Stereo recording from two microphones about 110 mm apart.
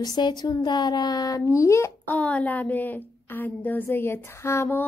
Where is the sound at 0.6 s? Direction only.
40° left (ahead or behind).